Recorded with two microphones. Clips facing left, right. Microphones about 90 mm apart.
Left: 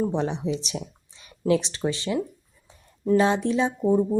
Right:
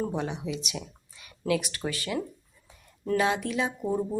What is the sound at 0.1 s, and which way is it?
Speech, 30° left (ahead or behind).